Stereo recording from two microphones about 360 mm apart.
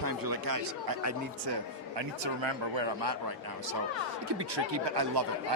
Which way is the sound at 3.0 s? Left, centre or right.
Right.